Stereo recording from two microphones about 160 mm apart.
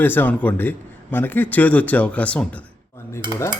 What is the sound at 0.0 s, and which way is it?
A man's voice, 10° left (ahead or behind).